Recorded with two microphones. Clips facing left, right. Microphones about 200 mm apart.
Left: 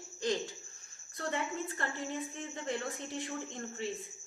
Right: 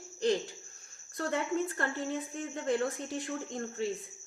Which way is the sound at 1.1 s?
50° right (ahead or behind).